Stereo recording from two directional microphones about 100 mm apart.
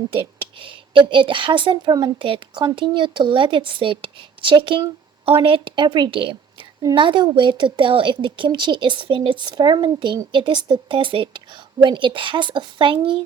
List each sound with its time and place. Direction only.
0.6 s a woman's voice: 60° right (ahead or behind); by 2.1 s 45° right (ahead or behind)
2.1 s a woman's voice: 60° right (ahead or behind)